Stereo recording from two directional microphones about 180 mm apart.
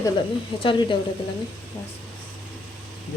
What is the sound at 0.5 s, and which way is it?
Speech, 30° left (ahead or behind).